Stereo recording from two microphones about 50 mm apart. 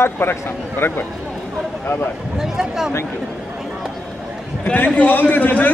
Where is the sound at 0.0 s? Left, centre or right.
Left.